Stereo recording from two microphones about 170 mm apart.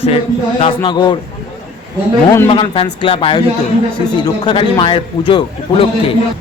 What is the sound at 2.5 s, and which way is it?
A man's voice, 30° left (ahead or behind).